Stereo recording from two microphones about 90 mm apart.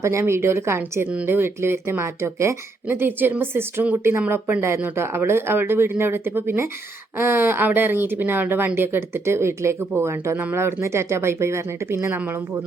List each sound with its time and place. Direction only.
0.0 s speech: 30° right (ahead or behind)